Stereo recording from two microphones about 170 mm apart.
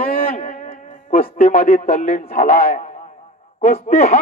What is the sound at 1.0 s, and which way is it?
Speech, 40° left (ahead or behind).